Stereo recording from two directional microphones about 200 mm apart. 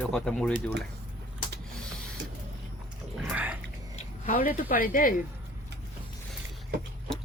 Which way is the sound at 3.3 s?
5° right (ahead or behind).